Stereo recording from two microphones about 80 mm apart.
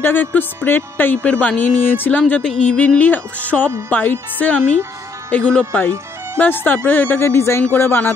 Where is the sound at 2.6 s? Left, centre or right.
Centre; by 8.1 s left.